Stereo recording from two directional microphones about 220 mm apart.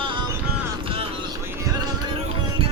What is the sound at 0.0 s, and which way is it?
Music, 20° right (ahead or behind).